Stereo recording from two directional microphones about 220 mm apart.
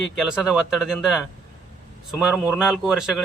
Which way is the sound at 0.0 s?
Centre (ahead or behind).